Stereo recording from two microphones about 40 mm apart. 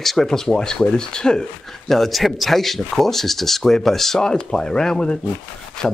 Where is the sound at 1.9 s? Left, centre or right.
Centre.